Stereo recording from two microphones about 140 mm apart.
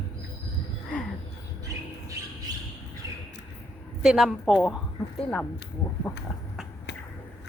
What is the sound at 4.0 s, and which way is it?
A woman's voice, 5° right (ahead or behind).